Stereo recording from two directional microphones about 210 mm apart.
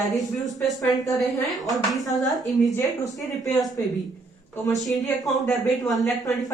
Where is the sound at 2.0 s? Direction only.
15° left (ahead or behind).